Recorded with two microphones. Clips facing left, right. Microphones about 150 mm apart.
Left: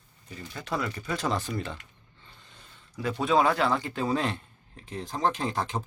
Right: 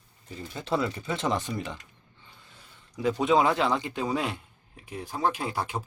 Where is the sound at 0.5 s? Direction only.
25° right (ahead or behind).